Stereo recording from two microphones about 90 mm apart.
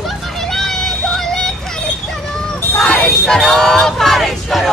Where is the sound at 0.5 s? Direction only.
5° left (ahead or behind).